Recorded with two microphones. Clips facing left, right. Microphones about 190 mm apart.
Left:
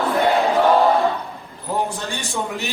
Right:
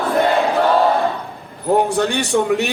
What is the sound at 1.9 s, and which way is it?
Speech, 70° right (ahead or behind).